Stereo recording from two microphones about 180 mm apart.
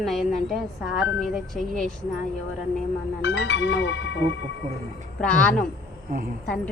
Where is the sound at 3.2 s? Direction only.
80° left.